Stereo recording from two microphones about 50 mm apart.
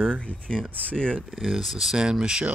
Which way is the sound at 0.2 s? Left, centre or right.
Centre.